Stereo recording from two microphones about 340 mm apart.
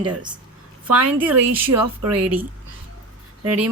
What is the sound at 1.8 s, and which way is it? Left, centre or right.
Speech, right.